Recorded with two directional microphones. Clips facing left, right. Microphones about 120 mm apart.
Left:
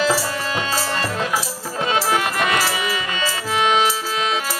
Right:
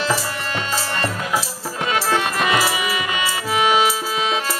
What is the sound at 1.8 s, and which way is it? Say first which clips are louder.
Music: left 1 dB; 30° left (ahead or behind).